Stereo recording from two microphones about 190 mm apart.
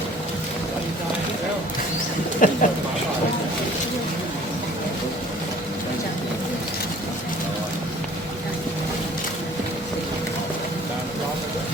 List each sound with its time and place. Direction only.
2.4 s speech: 45° left (ahead or behind)